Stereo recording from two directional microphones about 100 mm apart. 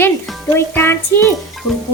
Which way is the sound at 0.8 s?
25° left (ahead or behind).